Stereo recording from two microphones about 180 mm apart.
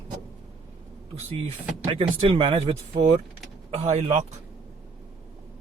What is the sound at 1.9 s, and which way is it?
Speech, 30° right (ahead or behind).